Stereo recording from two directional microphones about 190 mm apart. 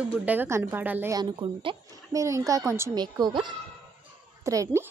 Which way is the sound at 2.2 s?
15° right (ahead or behind).